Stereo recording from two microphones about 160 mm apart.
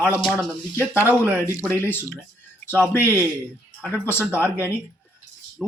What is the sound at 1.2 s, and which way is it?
A man's voice, 15° left (ahead or behind).